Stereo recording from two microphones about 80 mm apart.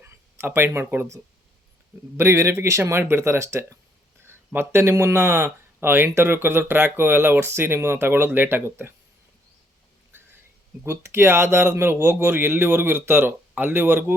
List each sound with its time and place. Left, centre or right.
0.0 s speech: right
10.8 s speech: right